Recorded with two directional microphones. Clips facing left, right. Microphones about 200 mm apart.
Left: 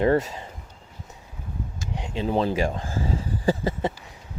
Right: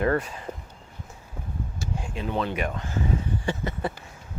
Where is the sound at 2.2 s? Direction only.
35° left (ahead or behind).